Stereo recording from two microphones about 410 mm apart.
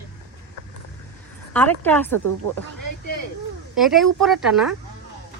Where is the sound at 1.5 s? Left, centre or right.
Centre.